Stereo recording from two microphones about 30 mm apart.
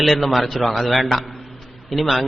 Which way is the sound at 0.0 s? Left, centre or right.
Centre.